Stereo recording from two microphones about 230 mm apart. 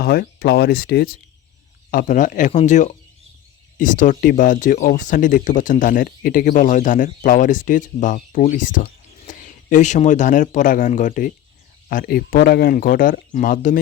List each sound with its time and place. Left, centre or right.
0.0 s speech: left